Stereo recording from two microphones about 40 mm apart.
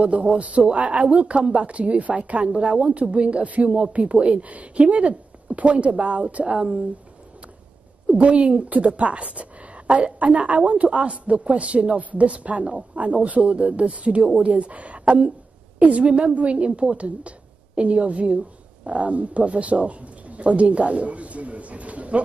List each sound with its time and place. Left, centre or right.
0.0 s speech: right
8.1 s a woman's voice: right